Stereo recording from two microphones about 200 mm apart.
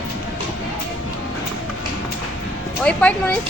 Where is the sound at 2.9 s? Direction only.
5° left (ahead or behind).